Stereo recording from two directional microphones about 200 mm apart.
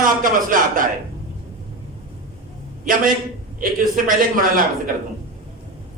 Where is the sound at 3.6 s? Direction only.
45° right (ahead or behind).